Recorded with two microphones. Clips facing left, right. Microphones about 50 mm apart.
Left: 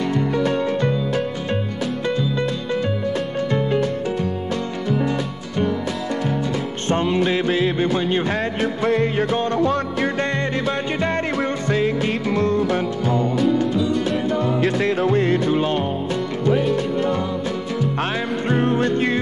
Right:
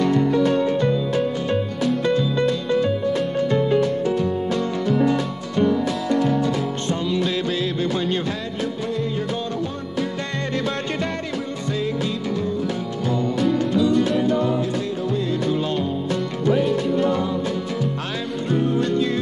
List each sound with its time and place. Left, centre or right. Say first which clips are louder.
6.9 s music: left 6 dB; left
8.3 s music: left 5 dB; left
8.8 s music: left 9 dB; left
9.6 s music: left 6 dB; left
11.3 s music: left 5 dB; left
14.6 s music: left 5 dB; left
18.5 s music: left 1 dB; left